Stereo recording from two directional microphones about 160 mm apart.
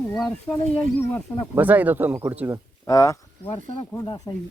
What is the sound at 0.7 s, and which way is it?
Speech, 10° left (ahead or behind).